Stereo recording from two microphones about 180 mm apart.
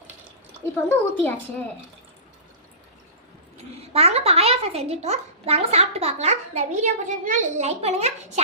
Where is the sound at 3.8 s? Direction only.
35° right (ahead or behind).